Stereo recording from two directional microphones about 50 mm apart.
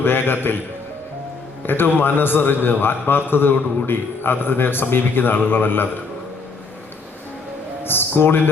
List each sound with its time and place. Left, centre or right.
0.0 s a man's voice: left
1.6 s a man's voice: left
7.9 s speech: left